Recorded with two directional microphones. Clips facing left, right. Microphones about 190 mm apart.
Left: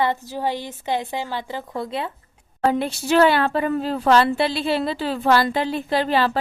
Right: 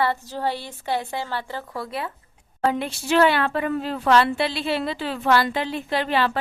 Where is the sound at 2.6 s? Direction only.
35° left (ahead or behind).